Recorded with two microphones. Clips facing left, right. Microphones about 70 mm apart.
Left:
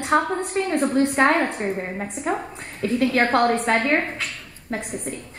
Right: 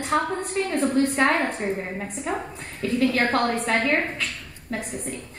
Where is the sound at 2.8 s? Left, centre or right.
Left.